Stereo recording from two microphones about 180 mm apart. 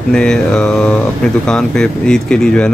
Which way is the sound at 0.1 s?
5° left (ahead or behind).